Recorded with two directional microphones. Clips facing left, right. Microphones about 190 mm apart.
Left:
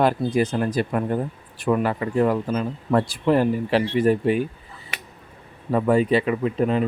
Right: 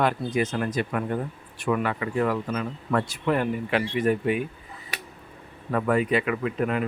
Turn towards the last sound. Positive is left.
turn(degrees=30)  # may be behind; listen again after turning